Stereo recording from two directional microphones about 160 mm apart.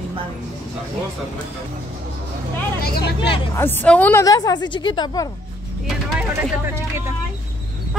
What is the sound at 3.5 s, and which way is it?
A woman's voice, 15° left (ahead or behind).